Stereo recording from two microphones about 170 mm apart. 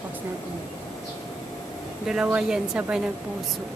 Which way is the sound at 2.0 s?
5° right (ahead or behind).